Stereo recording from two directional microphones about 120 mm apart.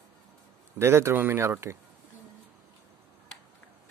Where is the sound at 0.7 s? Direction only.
20° right (ahead or behind).